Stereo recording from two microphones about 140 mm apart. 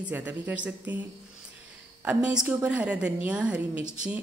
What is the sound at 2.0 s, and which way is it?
A woman's voice, 10° right (ahead or behind).